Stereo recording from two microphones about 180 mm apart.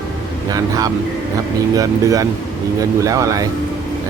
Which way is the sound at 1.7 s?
20° right (ahead or behind).